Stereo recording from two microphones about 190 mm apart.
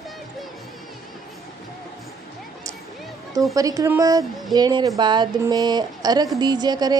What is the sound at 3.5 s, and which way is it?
A woman's voice, 15° right (ahead or behind).